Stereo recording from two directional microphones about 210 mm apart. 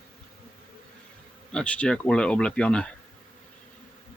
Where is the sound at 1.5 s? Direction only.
5° left (ahead or behind).